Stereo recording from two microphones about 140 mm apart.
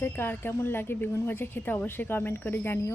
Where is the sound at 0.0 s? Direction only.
15° left (ahead or behind).